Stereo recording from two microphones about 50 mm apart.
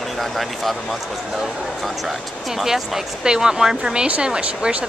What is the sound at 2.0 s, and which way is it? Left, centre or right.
Speech, centre.